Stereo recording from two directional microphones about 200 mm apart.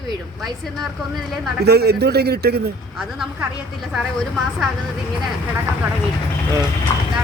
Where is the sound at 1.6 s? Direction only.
55° right (ahead or behind).